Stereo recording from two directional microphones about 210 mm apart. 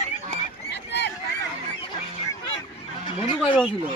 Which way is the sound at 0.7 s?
55° left (ahead or behind).